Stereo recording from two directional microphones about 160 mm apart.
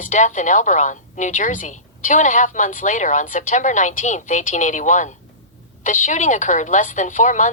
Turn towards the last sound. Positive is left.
turn(degrees=50)  # may be behind; listen again after turning